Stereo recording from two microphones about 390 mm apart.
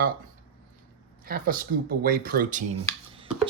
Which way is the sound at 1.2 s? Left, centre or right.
Right.